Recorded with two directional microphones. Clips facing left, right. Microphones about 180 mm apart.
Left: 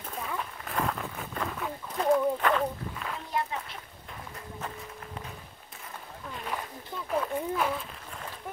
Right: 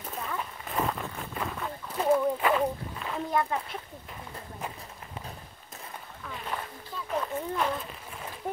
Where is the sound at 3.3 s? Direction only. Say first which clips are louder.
Right 4 dB; 50° right (ahead or behind).